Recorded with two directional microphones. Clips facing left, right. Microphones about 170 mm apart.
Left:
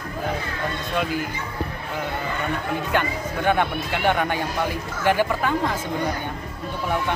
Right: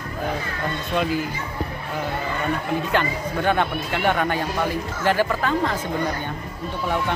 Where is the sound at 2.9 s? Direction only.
10° left (ahead or behind).